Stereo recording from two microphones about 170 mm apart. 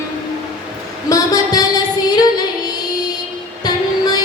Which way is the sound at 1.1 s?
20° left (ahead or behind).